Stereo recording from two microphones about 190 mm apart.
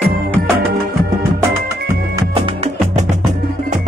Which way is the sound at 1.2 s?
15° right (ahead or behind).